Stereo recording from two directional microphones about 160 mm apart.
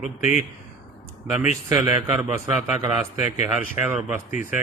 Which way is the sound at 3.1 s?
50° left (ahead or behind).